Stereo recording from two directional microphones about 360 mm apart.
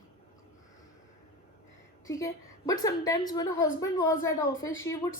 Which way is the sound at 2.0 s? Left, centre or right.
Centre.